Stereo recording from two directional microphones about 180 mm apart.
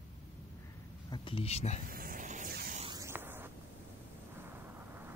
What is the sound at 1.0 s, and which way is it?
Speech, 25° left (ahead or behind).